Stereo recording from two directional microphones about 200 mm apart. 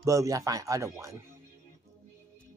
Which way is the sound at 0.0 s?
15° right (ahead or behind).